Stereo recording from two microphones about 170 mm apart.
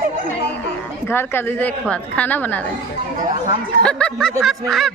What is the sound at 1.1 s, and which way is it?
Speech, 15° left (ahead or behind).